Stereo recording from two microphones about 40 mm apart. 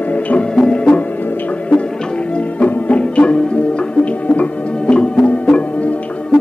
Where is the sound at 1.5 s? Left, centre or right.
Left.